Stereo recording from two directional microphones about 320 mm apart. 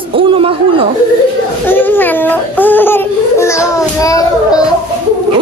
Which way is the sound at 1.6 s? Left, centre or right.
Centre.